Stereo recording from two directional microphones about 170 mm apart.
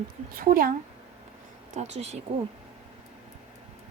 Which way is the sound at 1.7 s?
40° right (ahead or behind).